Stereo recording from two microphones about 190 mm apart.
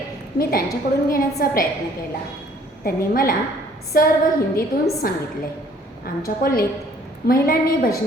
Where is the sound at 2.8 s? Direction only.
50° left (ahead or behind).